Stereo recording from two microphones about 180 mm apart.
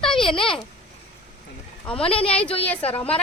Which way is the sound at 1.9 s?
30° left (ahead or behind).